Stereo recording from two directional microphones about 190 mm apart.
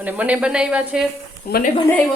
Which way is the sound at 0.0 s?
10° right (ahead or behind).